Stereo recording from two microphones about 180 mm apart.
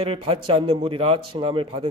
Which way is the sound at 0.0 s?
30° right (ahead or behind).